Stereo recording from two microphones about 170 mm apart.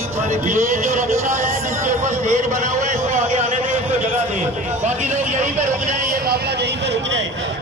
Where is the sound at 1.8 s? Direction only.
45° right (ahead or behind).